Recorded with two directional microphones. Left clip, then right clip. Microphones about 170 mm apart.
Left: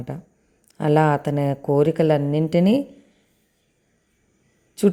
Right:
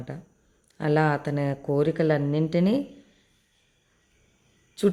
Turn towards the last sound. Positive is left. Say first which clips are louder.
# left 4 dB
turn(degrees=25)  # may be behind; listen again after turning